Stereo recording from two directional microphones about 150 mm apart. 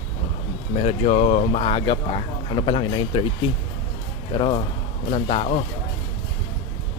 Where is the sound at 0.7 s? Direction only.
45° left (ahead or behind).